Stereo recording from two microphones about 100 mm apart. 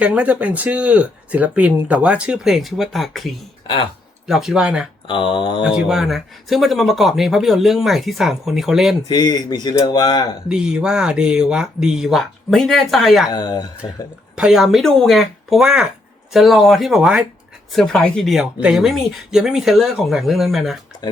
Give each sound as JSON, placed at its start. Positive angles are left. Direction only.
{"t": 0.0, "sound": "speech", "side_deg": -15}
{"t": 5.0, "sound": "speech", "side_deg": 55}
{"t": 5.6, "sound": "speech", "side_deg": -10}
{"t": 9.0, "sound": "speech", "side_deg": 45}
{"t": 10.5, "sound": "speech", "side_deg": -5}
{"t": 13.3, "sound": "speech", "side_deg": 40}
{"t": 14.3, "sound": "speech", "side_deg": -5}
{"t": 17.7, "sound": "speech", "side_deg": 5}